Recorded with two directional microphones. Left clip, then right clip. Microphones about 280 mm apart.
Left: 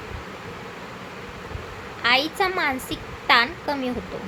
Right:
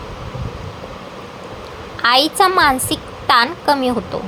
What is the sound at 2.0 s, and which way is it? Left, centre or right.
A woman's voice, centre.